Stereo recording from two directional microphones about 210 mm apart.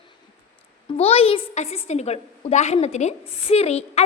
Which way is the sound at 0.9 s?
30° left (ahead or behind).